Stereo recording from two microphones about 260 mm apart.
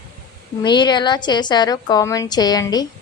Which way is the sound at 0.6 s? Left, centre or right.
Centre.